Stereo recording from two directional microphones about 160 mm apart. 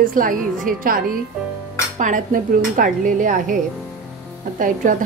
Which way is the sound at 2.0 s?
55° right (ahead or behind).